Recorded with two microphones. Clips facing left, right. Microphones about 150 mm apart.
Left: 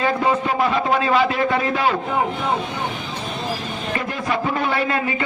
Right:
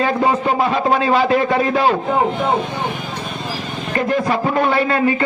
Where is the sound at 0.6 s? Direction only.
35° right (ahead or behind).